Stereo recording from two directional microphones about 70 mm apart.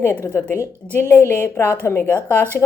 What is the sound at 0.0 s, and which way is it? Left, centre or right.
Speech, left.